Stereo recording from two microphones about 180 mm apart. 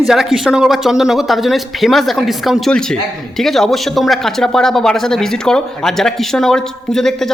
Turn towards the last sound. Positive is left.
turn(degrees=0)  # may be behind; listen again after turning